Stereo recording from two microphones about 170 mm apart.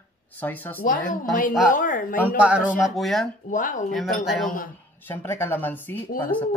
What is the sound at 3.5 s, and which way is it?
Speech, 50° left (ahead or behind).